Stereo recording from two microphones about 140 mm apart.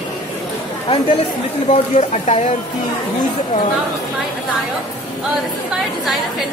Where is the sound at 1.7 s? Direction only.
55° left (ahead or behind).